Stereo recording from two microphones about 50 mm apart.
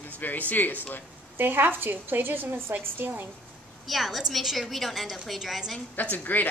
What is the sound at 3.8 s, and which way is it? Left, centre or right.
A woman's voice, centre.